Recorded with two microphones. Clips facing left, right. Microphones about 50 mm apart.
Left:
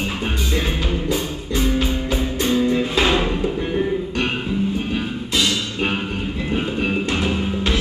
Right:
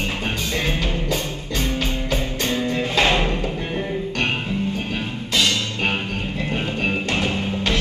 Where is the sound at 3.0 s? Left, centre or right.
Centre.